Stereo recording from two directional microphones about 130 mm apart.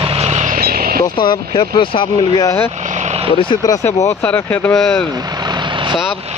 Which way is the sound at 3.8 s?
15° left (ahead or behind).